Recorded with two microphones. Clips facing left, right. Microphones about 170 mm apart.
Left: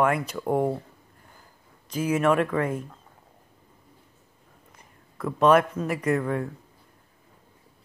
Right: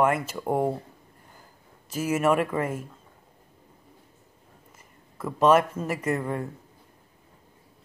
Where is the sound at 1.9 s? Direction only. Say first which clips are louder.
Left 1 dB; 5° right (ahead or behind).